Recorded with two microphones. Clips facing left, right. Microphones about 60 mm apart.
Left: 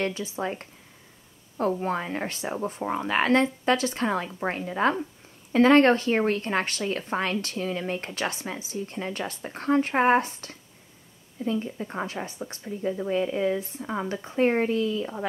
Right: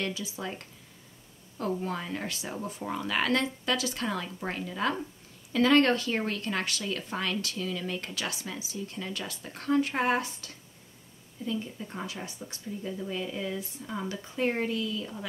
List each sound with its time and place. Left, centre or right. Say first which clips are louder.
0.0 s a woman's voice: left 6 dB; left